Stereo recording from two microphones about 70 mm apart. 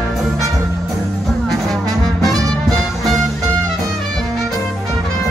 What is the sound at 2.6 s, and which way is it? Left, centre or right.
Music, centre.